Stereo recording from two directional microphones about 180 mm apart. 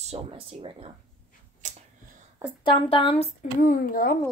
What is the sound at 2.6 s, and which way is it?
Speech, 30° left (ahead or behind).